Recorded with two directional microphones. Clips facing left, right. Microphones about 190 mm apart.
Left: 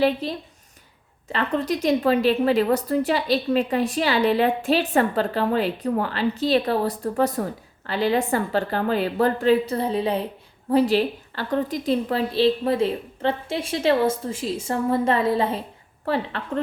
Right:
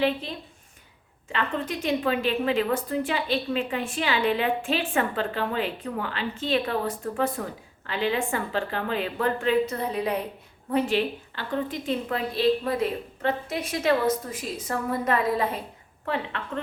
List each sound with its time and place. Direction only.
0.0 s a woman's voice: 35° left (ahead or behind)